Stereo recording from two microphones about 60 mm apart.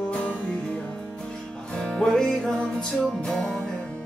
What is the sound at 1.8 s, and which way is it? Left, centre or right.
Music, centre.